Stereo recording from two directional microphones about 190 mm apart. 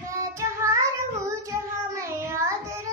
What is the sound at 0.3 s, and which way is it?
Child singing, 15° right (ahead or behind).